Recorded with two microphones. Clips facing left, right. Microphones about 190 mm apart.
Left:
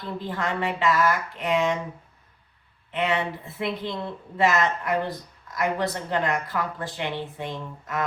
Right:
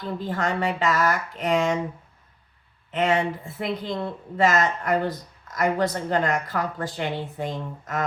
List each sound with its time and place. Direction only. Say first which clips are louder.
0.3 s a woman's voice: right 2 dB; 45° right (ahead or behind)
2.9 s a woman's voice: right 3 dB; 45° right (ahead or behind)